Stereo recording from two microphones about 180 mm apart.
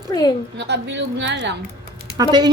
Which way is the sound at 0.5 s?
70° right (ahead or behind).